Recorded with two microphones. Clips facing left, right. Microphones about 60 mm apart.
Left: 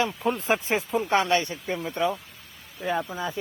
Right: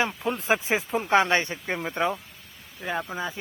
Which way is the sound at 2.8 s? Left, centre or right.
Centre.